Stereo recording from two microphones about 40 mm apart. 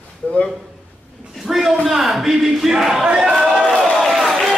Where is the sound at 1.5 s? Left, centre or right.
Centre.